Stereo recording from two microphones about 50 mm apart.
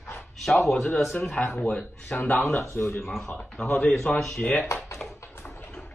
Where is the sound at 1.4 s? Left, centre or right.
Centre.